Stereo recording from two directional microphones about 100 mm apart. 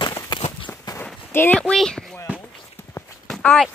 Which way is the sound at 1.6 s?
5° left (ahead or behind).